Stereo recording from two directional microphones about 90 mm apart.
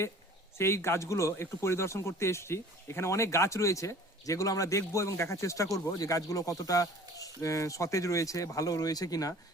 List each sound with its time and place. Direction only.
0.6 s speech: 30° left (ahead or behind)